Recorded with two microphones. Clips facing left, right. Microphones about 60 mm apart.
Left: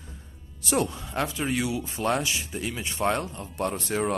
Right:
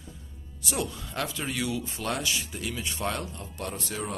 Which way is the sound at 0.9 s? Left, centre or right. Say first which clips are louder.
Left 4 dB; left.